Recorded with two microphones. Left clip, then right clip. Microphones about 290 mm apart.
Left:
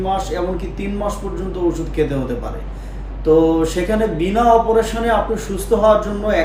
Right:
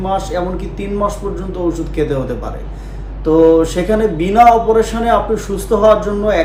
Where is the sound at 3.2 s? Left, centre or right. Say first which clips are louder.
Right 4 dB; centre.